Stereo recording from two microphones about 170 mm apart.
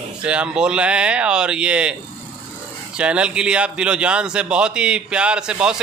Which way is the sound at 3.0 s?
5° right (ahead or behind).